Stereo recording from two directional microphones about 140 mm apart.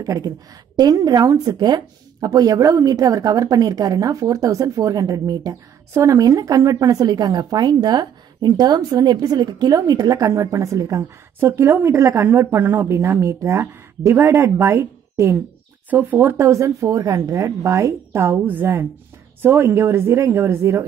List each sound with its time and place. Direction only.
0.0 s a woman's voice: 25° right (ahead or behind)